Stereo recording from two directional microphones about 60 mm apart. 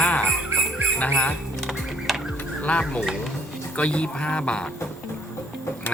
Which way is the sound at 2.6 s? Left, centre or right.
Left.